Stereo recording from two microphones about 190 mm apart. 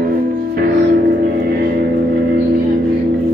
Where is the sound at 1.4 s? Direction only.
55° right (ahead or behind).